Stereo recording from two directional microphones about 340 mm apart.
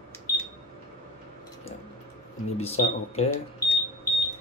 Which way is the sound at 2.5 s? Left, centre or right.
Centre.